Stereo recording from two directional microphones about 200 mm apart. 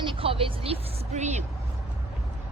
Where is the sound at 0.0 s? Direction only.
25° right (ahead or behind).